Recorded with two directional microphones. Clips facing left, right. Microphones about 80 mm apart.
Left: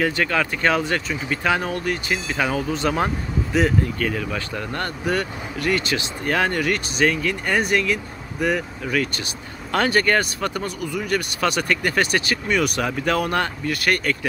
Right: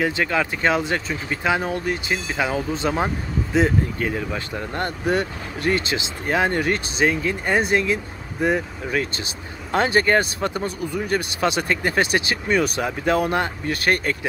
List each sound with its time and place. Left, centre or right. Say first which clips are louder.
0.0 s speech: even; centre